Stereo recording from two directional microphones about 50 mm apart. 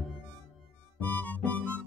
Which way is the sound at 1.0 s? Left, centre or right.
Left.